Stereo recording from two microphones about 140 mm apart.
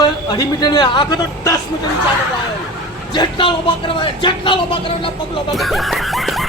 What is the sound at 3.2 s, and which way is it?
Speech, 35° left (ahead or behind).